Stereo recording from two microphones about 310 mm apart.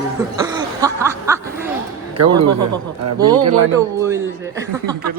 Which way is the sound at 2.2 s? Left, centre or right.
Right.